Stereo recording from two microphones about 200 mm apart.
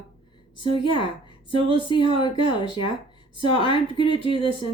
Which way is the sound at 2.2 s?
25° left (ahead or behind).